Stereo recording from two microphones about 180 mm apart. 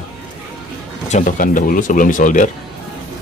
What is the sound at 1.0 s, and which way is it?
Speech, 40° left (ahead or behind).